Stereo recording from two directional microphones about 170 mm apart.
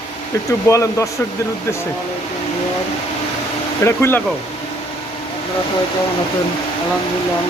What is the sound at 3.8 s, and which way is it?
Speech, 15° left (ahead or behind).